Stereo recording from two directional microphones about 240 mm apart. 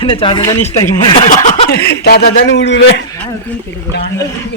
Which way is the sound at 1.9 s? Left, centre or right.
Left.